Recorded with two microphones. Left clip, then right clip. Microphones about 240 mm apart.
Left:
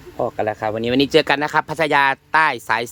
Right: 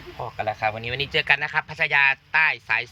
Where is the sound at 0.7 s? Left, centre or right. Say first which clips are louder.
Left 9 dB; left.